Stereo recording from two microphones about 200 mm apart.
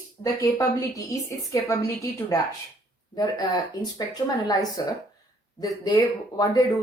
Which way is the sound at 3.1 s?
20° left (ahead or behind).